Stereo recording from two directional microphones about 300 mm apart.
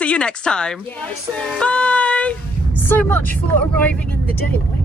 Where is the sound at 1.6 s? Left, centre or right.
Centre.